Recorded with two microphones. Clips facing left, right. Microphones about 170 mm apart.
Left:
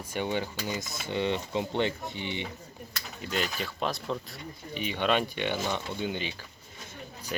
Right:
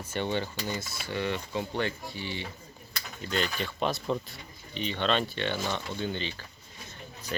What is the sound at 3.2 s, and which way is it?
Speech, 5° left (ahead or behind).